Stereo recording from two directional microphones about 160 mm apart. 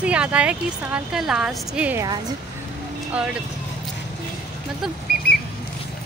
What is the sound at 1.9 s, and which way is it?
Speech, 25° right (ahead or behind).